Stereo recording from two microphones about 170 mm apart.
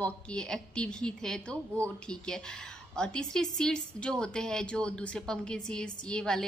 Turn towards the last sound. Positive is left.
turn(degrees=5)  # may be behind; listen again after turning